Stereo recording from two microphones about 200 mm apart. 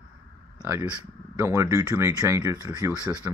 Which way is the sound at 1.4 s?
15° right (ahead or behind).